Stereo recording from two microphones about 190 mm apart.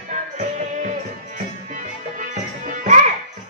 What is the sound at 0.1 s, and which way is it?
Music, 40° right (ahead or behind).